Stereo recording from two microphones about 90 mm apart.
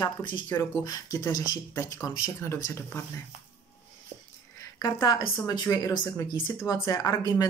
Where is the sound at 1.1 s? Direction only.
45° left (ahead or behind).